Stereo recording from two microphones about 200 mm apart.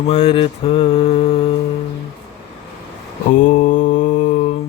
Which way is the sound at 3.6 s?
40° left (ahead or behind).